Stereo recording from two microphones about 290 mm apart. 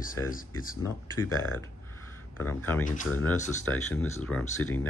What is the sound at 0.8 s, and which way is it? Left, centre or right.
Speech, centre.